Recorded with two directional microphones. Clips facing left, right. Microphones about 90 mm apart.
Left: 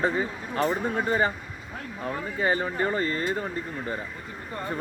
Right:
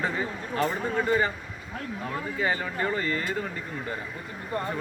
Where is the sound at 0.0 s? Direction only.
25° left (ahead or behind).